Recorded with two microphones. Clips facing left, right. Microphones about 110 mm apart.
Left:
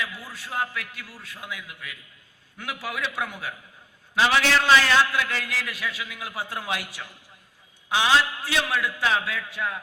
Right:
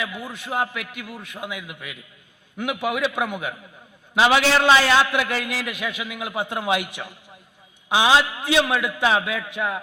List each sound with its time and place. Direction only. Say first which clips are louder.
0.0 s a man's voice: right 4 dB; 20° right (ahead or behind)